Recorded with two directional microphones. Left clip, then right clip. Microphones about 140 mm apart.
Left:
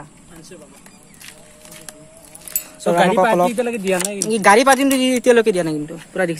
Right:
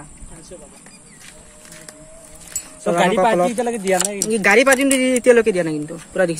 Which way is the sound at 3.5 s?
90° left.